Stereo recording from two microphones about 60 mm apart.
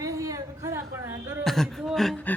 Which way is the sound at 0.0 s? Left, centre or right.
Right.